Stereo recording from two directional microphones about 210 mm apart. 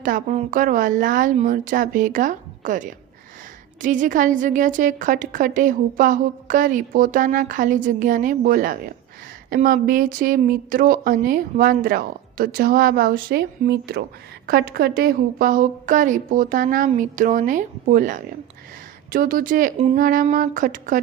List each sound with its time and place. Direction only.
0.0 s a woman's voice: 35° right (ahead or behind)